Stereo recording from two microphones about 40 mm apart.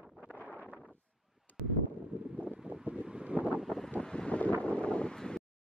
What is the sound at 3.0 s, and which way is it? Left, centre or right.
Wind noise, right.